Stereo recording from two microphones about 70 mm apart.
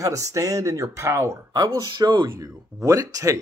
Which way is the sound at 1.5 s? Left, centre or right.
Right.